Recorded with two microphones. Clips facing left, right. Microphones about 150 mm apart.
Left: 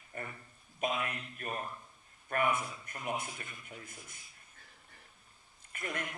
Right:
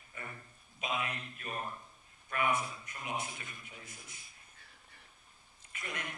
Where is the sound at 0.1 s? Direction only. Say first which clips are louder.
Left 4 dB; 50° left (ahead or behind).